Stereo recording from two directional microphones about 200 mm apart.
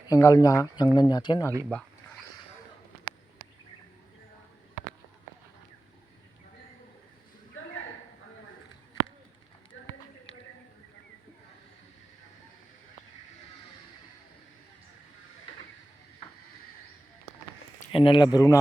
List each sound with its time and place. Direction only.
0.1 s speech: 15° left (ahead or behind)
9.7 s run: 70° left (ahead or behind)
17.9 s a sound: 25° left (ahead or behind)
18.3 s speech: 15° left (ahead or behind)